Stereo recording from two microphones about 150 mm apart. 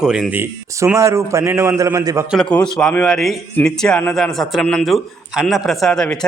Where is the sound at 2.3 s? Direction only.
5° left (ahead or behind).